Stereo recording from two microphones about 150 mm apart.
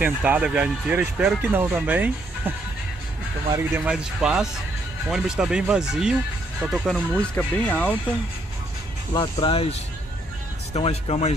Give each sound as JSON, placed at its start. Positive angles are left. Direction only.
{"t": 0.0, "sound": "speech", "side_deg": -10}
{"t": 3.5, "sound": "speech", "side_deg": -15}
{"t": 3.9, "sound": "speech", "side_deg": -5}
{"t": 7.2, "sound": "speech", "side_deg": 10}
{"t": 9.1, "sound": "speech", "side_deg": 30}